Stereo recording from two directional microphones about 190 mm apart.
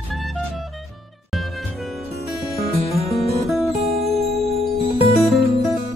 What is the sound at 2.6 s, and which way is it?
Music, 35° left (ahead or behind).